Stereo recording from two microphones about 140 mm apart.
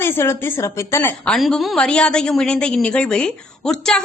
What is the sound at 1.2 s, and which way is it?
A woman's voice, 5° left (ahead or behind).